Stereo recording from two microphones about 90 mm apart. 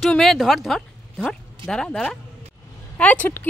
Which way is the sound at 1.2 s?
10° left (ahead or behind).